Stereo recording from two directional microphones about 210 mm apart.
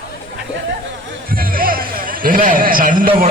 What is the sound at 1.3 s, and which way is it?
Music, 45° right (ahead or behind).